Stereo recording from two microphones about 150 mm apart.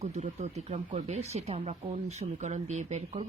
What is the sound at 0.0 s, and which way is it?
Speech, 45° right (ahead or behind).